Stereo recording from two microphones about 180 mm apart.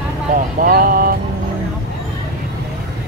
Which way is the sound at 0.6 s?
55° right (ahead or behind).